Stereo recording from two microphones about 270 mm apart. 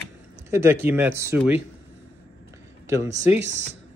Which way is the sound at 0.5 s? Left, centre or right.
Centre.